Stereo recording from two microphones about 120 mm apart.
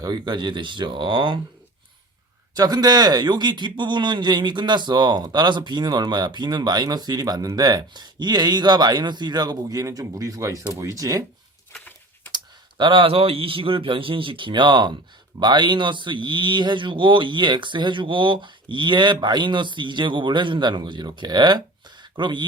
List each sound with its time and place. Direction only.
0.0 s a man's voice: 35° right (ahead or behind)
2.6 s a man's voice: 35° right (ahead or behind)
12.3 s a man's voice: 40° right (ahead or behind)